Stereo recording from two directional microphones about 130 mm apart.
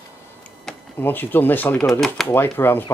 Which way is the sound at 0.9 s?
15° left (ahead or behind).